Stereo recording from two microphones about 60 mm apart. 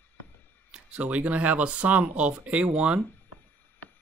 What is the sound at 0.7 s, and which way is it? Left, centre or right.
Speech, centre.